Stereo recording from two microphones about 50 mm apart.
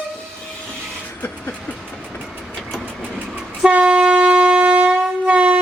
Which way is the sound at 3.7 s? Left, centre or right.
Centre.